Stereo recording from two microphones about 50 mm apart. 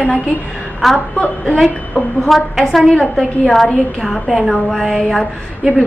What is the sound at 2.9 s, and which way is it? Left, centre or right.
Speech, centre.